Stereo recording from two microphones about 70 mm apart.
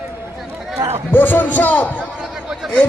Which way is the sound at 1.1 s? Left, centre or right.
Left.